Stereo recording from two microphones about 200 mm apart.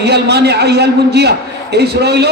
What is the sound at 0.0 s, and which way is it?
A man's voice, 55° right (ahead or behind).